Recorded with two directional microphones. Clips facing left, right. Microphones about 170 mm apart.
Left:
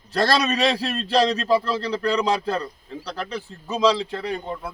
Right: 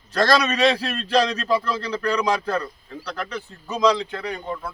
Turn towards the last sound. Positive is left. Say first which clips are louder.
# left 1 dB
turn(degrees=30)  # may be behind; listen again after turning